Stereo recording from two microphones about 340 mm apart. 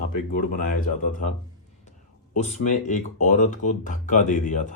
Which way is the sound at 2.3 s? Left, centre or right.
Left.